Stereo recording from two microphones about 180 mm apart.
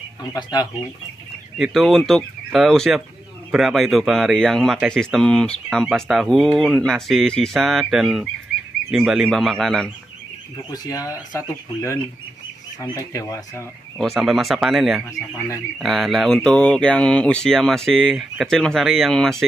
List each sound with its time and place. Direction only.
0.3 s speech: 20° left (ahead or behind)
1.6 s speech: centre (ahead or behind)
10.7 s speech: 20° left (ahead or behind)
13.9 s speech: centre (ahead or behind)
15.1 s speech: 15° left (ahead or behind)
15.8 s speech: centre (ahead or behind)